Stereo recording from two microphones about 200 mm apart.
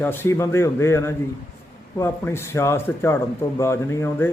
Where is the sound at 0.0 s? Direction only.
10° left (ahead or behind).